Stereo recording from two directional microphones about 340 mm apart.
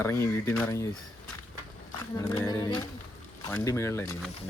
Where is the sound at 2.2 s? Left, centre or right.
Centre.